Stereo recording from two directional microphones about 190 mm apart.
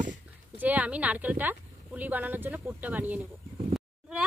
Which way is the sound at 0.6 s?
10° right (ahead or behind).